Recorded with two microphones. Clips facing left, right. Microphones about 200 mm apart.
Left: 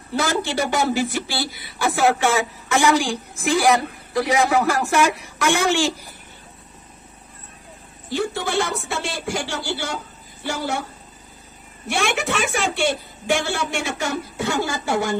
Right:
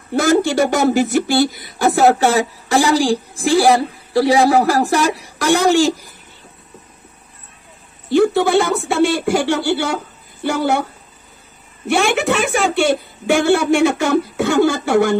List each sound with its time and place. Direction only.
0.1 s speech: 45° right (ahead or behind)
8.1 s speech: 60° right (ahead or behind)
12.5 s speech: 55° right (ahead or behind)